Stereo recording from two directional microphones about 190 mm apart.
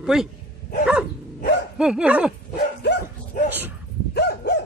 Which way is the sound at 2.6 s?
60° left (ahead or behind).